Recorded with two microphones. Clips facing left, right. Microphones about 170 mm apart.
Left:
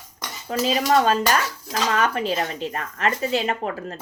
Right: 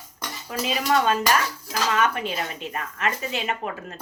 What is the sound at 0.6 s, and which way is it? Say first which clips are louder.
Speech: left 3 dB; 35° left (ahead or behind).